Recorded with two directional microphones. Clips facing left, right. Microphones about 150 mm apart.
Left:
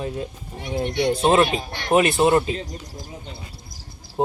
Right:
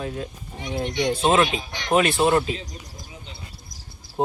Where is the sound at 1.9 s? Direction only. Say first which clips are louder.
Left 2 dB; 20° left (ahead or behind).